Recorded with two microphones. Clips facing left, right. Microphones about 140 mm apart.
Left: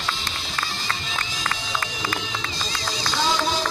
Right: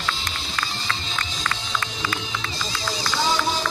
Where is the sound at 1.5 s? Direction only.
40° left (ahead or behind).